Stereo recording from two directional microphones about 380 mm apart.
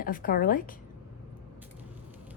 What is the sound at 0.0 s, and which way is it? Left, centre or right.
Speech, left.